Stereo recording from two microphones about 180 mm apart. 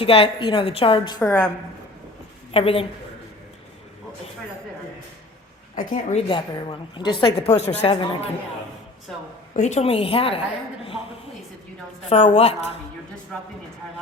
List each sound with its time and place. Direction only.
0.0 s a woman's voice: 30° left (ahead or behind)
2.5 s a woman's voice: 30° left (ahead or behind)
5.7 s a woman's voice: 50° left (ahead or behind)
6.2 s a woman's voice: 30° left (ahead or behind)
9.6 s a woman's voice: 40° left (ahead or behind)
12.0 s a woman's voice: 40° left (ahead or behind)